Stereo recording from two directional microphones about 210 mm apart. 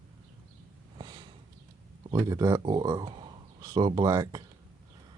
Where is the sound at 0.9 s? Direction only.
20° right (ahead or behind).